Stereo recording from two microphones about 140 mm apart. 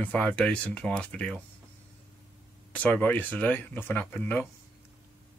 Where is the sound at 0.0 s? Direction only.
10° left (ahead or behind).